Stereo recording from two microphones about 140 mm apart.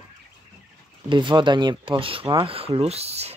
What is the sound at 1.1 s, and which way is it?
Speech, 35° right (ahead or behind).